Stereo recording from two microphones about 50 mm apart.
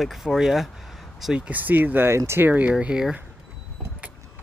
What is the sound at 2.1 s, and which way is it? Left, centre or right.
Speech, right.